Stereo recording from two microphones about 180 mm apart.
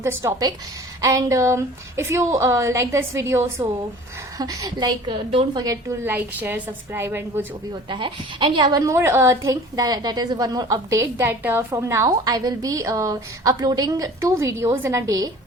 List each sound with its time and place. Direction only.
0.0 s a woman's voice: 15° right (ahead or behind); by 5.6 s 30° right (ahead or behind)
5.6 s a woman's voice: 15° right (ahead or behind)
7.7 s a woman's voice: 25° right (ahead or behind)